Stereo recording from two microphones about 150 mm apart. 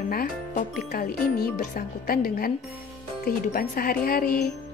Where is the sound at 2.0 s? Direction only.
80° left.